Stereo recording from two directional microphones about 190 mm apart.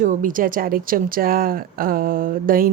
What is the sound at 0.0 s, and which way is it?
Speech, 45° right (ahead or behind).